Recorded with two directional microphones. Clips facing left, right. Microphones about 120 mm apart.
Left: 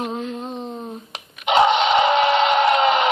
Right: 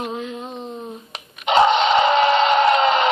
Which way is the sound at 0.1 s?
40° left (ahead or behind).